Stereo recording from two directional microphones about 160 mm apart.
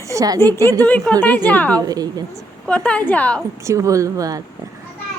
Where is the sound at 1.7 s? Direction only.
20° right (ahead or behind).